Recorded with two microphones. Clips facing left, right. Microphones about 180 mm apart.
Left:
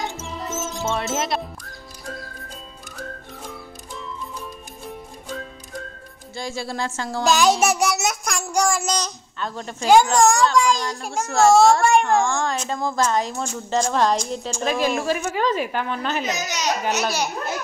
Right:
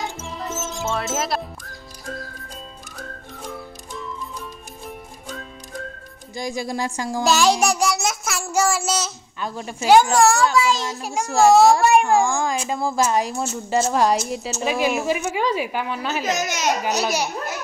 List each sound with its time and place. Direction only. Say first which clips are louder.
0.0 s music: even; centre (ahead or behind)
0.7 s speech: even; 5° right (ahead or behind)
6.3 s a child's voice: right 2 dB; 15° right (ahead or behind)
7.6 s a child's voice: even; centre (ahead or behind)
16.3 s speech: right 3 dB; 50° right (ahead or behind)
17.0 s a child's voice: right 1 dB; 10° right (ahead or behind)